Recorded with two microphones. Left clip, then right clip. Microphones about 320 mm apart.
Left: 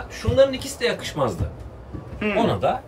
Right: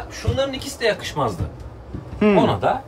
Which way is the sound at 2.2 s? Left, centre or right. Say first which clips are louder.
Right 7 dB; centre.